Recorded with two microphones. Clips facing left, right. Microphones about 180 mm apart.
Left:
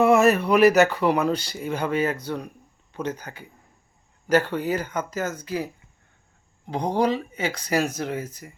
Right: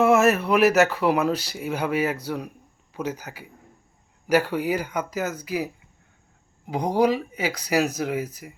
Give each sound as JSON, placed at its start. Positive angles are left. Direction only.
{"t": 0.0, "sound": "speech", "side_deg": 0}